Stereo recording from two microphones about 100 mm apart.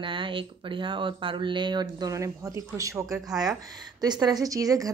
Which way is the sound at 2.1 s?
30° right (ahead or behind).